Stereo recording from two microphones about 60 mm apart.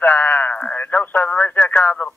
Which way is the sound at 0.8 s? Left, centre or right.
Left.